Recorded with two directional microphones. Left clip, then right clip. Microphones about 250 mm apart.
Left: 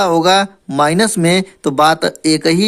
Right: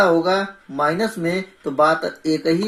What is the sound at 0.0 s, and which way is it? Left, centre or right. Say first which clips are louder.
Speech: left 5 dB; left.